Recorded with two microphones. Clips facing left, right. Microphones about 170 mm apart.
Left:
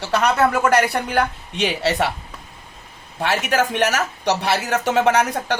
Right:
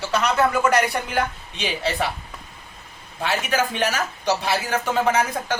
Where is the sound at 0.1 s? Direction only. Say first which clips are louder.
Left 3 dB; 55° left (ahead or behind).